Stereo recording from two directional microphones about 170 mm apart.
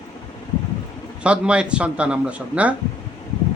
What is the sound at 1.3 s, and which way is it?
Speech, 5° right (ahead or behind).